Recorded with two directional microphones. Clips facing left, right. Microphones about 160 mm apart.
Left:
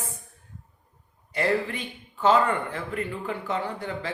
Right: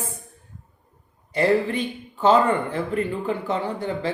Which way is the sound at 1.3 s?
30° right (ahead or behind).